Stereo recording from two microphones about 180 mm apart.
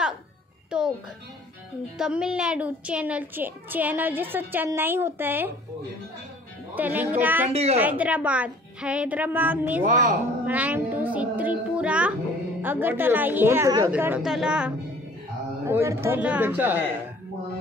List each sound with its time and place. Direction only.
0.7 s music: 5° right (ahead or behind)
2.0 s a child's voice: 5° right (ahead or behind)
6.7 s a child's voice: 10° right (ahead or behind)
7.5 s a woman's voice: 35° right (ahead or behind)
7.8 s a child's voice: 10° right (ahead or behind)
9.8 s a woman's voice: 45° right (ahead or behind)
10.4 s cat: 10° right (ahead or behind)
12.6 s a child's voice: 10° right (ahead or behind)
15.6 s a child's voice: 15° right (ahead or behind)